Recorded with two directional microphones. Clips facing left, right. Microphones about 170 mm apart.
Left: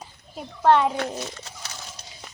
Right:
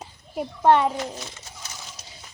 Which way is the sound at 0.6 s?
10° right (ahead or behind).